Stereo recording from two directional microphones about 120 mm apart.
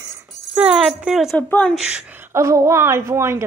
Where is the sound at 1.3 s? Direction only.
10° left (ahead or behind).